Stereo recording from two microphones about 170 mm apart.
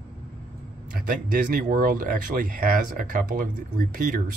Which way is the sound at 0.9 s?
55° right (ahead or behind).